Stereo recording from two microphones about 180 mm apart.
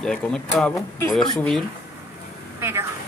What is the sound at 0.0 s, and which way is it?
Speech, 5° left (ahead or behind).